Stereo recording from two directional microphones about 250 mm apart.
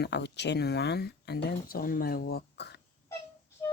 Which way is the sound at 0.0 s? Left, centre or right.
Left.